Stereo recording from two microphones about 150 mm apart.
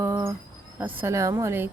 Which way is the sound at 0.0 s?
15° right (ahead or behind).